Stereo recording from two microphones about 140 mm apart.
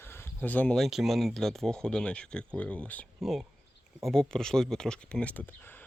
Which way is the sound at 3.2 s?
Centre (ahead or behind).